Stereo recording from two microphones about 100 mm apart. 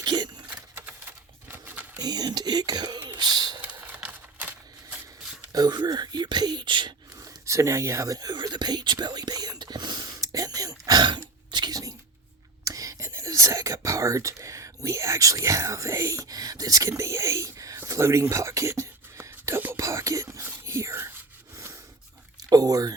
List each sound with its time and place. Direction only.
0.0 s keys jangling: 45° right (ahead or behind)
0.9 s typewriter: 20° right (ahead or behind)
2.0 s speech: 40° right (ahead or behind)
3.8 s a sound: 15° right (ahead or behind)
5.5 s speech: 40° right (ahead or behind)
7.2 s whispering: 30° right (ahead or behind)
11.5 s a sound: 40° right (ahead or behind)
12.6 s whispering: 35° right (ahead or behind)
13.1 s speech: 30° right (ahead or behind)
17.7 s whispering: 30° right (ahead or behind)
22.4 s a sound: 40° right (ahead or behind)